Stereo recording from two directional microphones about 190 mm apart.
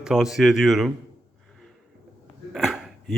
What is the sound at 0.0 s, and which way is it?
Speech, 5° right (ahead or behind).